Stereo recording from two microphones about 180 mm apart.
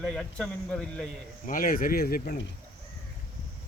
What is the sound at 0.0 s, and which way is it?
Speech, centre (ahead or behind).